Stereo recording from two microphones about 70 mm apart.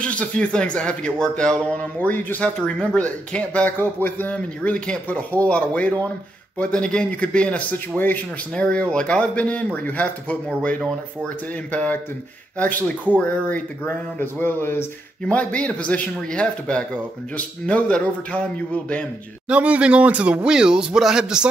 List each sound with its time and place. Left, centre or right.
0.0 s speech: centre
2.0 s speech: left
15.2 s speech: centre
19.5 s speech: centre